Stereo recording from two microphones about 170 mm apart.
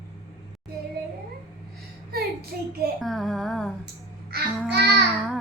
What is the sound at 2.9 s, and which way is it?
Speech, centre (ahead or behind).